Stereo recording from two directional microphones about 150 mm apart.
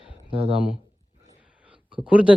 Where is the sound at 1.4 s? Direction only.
5° right (ahead or behind).